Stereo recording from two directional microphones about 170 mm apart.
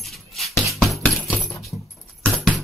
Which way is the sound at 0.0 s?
Centre (ahead or behind).